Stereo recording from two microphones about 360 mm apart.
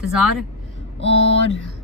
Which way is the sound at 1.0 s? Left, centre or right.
Right.